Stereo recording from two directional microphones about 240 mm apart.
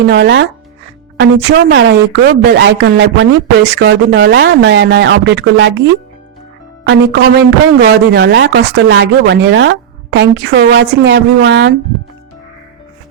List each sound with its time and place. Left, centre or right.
0.1 s speech: right